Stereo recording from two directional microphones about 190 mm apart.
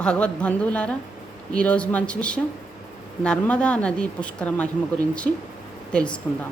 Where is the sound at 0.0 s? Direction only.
5° left (ahead or behind).